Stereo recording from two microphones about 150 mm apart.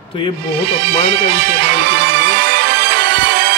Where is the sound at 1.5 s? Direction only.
90° right.